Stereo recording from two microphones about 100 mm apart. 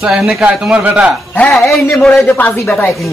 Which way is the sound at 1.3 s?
15° left (ahead or behind).